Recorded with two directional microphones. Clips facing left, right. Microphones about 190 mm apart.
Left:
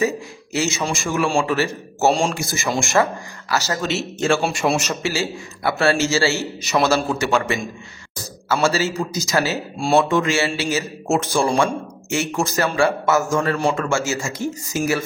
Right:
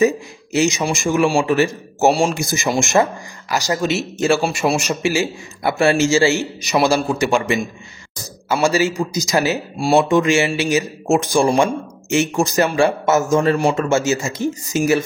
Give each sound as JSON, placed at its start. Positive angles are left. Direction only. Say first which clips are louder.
{"t": 0.0, "sound": "a man's voice", "louder": "right 5 dB", "side_deg": -20}